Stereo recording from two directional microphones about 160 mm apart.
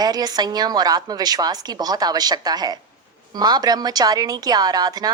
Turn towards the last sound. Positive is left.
turn(degrees=-25)  # may be behind; listen again after turning